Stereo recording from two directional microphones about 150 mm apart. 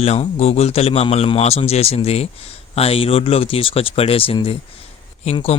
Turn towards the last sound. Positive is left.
turn(degrees=45)  # may be behind; listen again after turning